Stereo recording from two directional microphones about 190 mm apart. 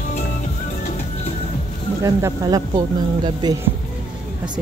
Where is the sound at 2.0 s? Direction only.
20° right (ahead or behind).